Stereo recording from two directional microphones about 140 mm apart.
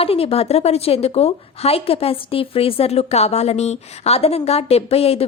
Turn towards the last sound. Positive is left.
turn(degrees=45)  # may be behind; listen again after turning